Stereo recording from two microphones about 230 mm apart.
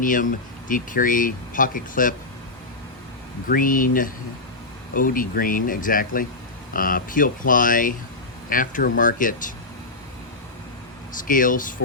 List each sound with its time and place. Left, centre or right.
0.0 s speech: left
3.5 s speech: left
11.1 s speech: left